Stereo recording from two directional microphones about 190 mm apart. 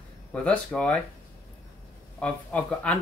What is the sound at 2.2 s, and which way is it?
Speech, 5° left (ahead or behind).